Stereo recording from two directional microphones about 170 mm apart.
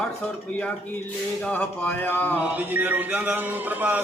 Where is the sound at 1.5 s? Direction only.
10° left (ahead or behind).